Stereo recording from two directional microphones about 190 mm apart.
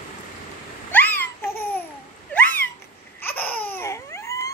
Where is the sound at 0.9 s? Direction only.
10° left (ahead or behind).